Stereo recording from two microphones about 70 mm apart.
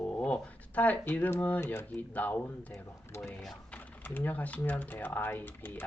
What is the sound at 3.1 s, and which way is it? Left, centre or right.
Speech, left.